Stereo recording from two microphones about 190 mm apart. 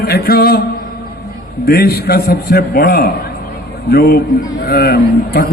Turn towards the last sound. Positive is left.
turn(degrees=55)  # may be behind; listen again after turning